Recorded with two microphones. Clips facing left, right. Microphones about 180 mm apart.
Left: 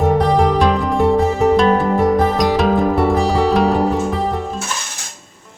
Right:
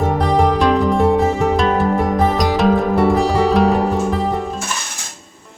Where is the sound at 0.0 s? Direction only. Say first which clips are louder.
Left 2 dB; centre (ahead or behind).